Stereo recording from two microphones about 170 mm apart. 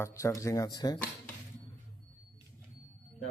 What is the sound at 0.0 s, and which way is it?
Speech, 15° left (ahead or behind).